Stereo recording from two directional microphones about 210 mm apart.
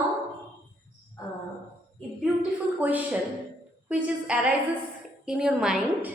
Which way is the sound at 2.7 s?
5° right (ahead or behind).